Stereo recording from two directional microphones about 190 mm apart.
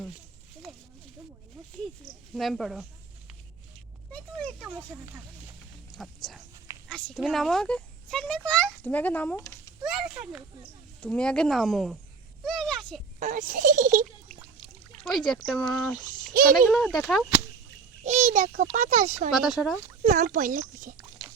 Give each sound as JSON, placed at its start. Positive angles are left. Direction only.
{"t": 2.3, "sound": "speech", "side_deg": 0}
{"t": 4.1, "sound": "a sound", "side_deg": 5}
{"t": 5.9, "sound": "speech", "side_deg": 0}
{"t": 9.8, "sound": "speech", "side_deg": -5}
{"t": 12.5, "sound": "a sound", "side_deg": 0}
{"t": 13.1, "sound": "speech", "side_deg": -45}
{"t": 15.0, "sound": "speech", "side_deg": 0}
{"t": 18.0, "sound": "speech", "side_deg": -35}
{"t": 19.3, "sound": "speech", "side_deg": 0}
{"t": 20.0, "sound": "speech", "side_deg": -40}